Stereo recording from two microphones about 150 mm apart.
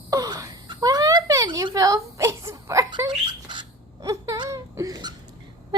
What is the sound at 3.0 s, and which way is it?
Wail, 30° right (ahead or behind).